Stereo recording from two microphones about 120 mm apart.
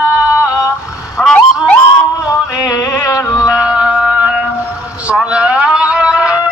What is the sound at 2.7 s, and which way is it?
Music, 30° left (ahead or behind).